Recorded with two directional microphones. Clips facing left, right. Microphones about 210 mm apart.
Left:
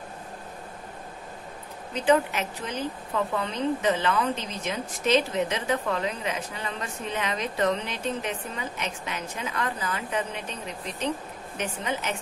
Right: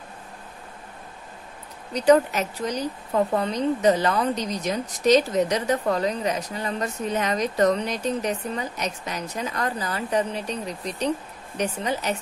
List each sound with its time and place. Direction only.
2.0 s a woman's voice: 40° right (ahead or behind)